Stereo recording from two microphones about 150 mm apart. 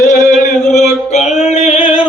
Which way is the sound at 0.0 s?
55° left (ahead or behind).